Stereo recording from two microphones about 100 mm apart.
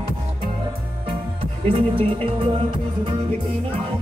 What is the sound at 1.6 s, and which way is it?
Music, 65° right (ahead or behind).